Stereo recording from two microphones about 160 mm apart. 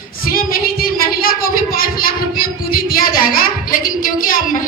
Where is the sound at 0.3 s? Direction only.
65° left (ahead or behind).